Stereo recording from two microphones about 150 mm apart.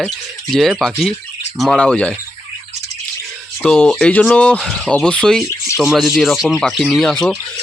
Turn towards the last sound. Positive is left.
turn(degrees=5)  # may be behind; listen again after turning